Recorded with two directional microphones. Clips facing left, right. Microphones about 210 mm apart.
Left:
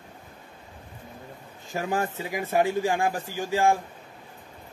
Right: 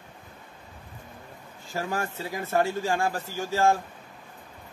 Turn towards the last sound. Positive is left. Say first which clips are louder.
# left 1 dB
turn(degrees=15)  # may be behind; listen again after turning